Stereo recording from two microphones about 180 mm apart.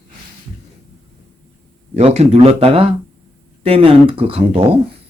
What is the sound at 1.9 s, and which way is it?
Speech, 35° right (ahead or behind).